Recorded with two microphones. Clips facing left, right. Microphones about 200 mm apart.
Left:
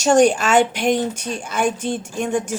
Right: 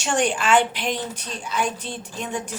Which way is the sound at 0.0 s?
40° left (ahead or behind).